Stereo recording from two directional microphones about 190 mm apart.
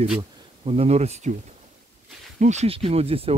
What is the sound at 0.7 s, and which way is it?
Speech, 35° right (ahead or behind).